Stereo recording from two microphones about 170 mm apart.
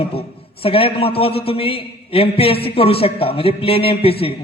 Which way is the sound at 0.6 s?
35° left (ahead or behind).